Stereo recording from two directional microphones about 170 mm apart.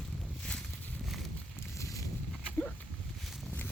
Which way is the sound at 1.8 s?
20° left (ahead or behind).